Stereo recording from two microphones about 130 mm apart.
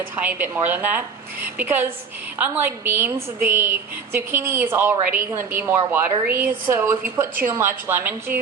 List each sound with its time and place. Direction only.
0.2 s a woman's voice: 15° right (ahead or behind)